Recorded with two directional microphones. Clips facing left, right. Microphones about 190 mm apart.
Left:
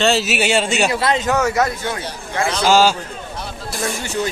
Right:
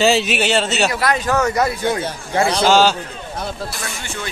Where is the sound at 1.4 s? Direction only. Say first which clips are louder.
Right 1 dB; 5° left (ahead or behind).